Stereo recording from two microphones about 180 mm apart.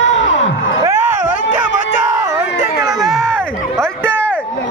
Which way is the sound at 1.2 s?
45° left (ahead or behind).